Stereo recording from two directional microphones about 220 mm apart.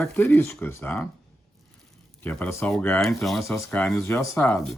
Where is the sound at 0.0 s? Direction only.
10° left (ahead or behind).